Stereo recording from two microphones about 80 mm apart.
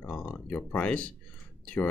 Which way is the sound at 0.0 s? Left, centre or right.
Centre.